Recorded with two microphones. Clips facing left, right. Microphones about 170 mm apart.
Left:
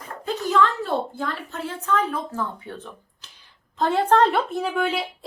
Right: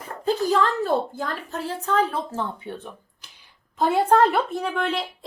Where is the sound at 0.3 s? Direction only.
35° right (ahead or behind).